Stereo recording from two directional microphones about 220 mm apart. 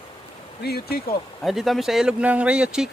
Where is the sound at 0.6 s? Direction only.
45° left (ahead or behind).